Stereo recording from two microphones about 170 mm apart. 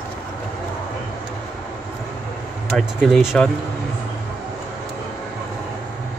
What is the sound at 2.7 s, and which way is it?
Speech, centre (ahead or behind).